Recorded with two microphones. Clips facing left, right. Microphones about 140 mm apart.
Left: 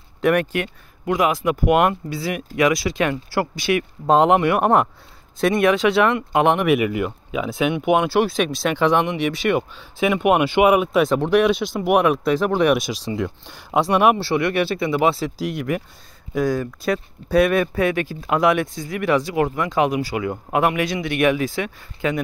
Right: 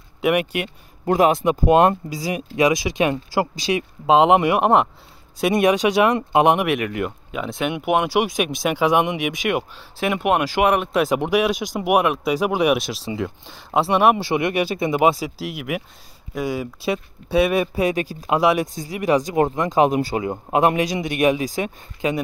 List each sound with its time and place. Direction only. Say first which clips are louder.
0.2 s speech: left 1 dB; 10° right (ahead or behind)
1.0 s speech: right 3 dB; 35° right (ahead or behind)
1.4 s speech: right 2 dB; 25° right (ahead or behind)
4.0 s speech: right 1 dB; 5° right (ahead or behind)
6.6 s speech: left 3 dB; centre (ahead or behind)
11.1 s speech: left 2 dB; 10° right (ahead or behind)
14.1 s speech: left 1 dB; 15° right (ahead or behind)